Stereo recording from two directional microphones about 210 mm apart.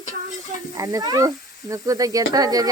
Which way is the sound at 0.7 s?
15° right (ahead or behind).